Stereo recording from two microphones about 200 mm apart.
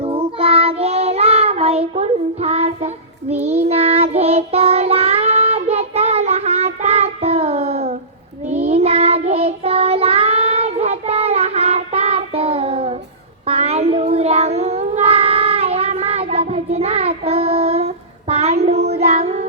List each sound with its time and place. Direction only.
0.0 s child singing: 30° right (ahead or behind)